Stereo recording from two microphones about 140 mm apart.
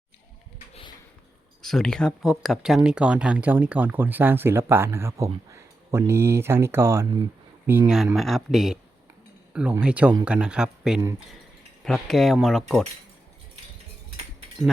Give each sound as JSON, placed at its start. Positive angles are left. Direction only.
{"t": 0.7, "sound": "a sound", "side_deg": 40}
{"t": 1.6, "sound": "speech", "side_deg": 5}
{"t": 8.1, "sound": "speech", "side_deg": 0}